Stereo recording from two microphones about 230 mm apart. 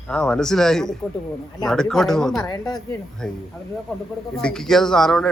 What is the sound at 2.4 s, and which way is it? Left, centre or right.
Speech, centre.